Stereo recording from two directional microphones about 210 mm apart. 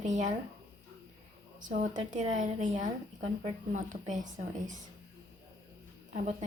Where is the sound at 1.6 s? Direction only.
35° right (ahead or behind).